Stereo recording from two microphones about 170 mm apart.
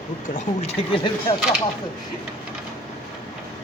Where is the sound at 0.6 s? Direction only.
30° left (ahead or behind).